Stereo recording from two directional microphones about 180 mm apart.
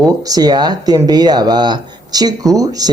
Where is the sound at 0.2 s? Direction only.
20° right (ahead or behind).